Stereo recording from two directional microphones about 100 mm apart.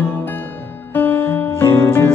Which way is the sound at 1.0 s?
20° left (ahead or behind).